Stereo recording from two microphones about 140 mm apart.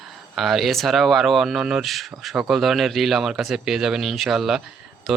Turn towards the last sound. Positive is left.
turn(degrees=0)  # may be behind; listen again after turning